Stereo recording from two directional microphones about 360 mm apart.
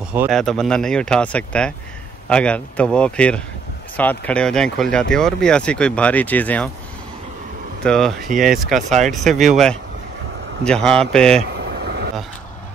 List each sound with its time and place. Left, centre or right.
0.1 s speech: centre
7.8 s speech: centre
10.6 s speech: centre
11.8 s vehicle: right